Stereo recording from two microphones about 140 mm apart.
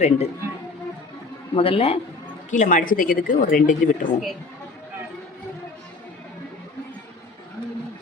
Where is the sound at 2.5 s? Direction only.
65° left (ahead or behind).